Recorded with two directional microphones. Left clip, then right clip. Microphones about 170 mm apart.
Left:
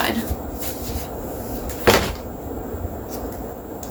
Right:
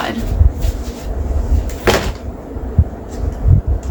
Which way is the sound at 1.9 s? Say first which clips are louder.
Right 2 dB; 35° right (ahead or behind).